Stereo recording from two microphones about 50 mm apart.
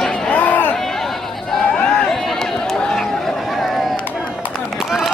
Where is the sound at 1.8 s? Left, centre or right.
Centre.